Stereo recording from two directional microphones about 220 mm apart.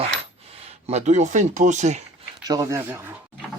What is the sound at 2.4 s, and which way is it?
Speech, 15° right (ahead or behind).